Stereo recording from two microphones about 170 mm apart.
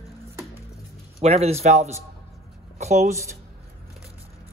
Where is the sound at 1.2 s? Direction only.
35° right (ahead or behind).